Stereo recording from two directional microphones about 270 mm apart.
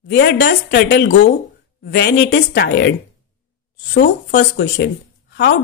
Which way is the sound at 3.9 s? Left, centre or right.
Left.